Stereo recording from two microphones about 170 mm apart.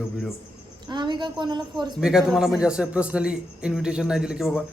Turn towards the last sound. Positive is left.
turn(degrees=-5)  # may be behind; listen again after turning